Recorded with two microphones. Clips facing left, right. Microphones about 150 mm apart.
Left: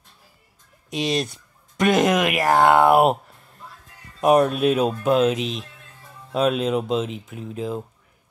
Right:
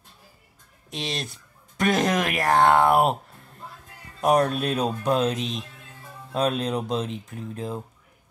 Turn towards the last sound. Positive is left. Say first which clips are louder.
# left 4 dB
turn(degrees=5)  # may be behind; listen again after turning